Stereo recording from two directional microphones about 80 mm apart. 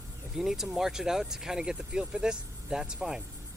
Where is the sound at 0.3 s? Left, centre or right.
Centre.